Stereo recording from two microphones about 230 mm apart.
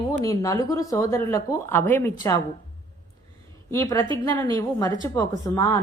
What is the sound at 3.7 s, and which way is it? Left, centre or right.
Speech, centre.